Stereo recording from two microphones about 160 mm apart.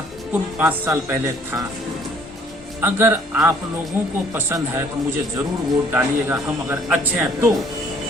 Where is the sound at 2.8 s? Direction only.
15° right (ahead or behind).